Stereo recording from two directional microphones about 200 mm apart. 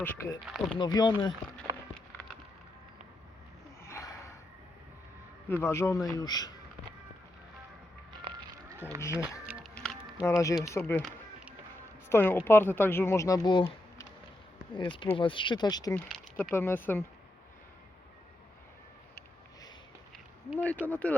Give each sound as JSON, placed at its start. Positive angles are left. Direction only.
{"t": 0.0, "sound": "speech", "side_deg": 10}
{"t": 0.4, "sound": "speech", "side_deg": 0}
{"t": 0.8, "sound": "speech", "side_deg": 20}
{"t": 3.8, "sound": "gasp", "side_deg": 15}
{"t": 5.5, "sound": "speech", "side_deg": 15}
{"t": 9.0, "sound": "speech", "side_deg": 15}
{"t": 9.7, "sound": "a sound", "side_deg": 5}
{"t": 10.2, "sound": "speech", "side_deg": 15}
{"t": 20.1, "sound": "a sound", "side_deg": 0}
{"t": 20.8, "sound": "speech", "side_deg": 10}